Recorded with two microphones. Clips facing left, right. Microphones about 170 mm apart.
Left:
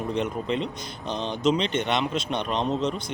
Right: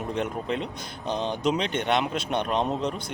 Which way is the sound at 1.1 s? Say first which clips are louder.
Left 1 dB; 10° right (ahead or behind).